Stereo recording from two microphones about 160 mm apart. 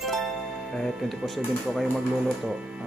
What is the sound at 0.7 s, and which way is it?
Speech, centre (ahead or behind).